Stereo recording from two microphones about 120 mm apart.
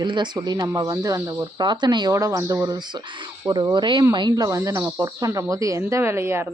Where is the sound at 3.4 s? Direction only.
35° right (ahead or behind).